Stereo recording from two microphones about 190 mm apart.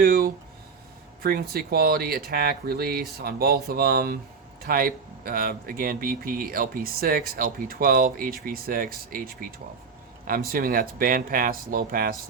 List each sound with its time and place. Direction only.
0.0 s speech: 50° right (ahead or behind)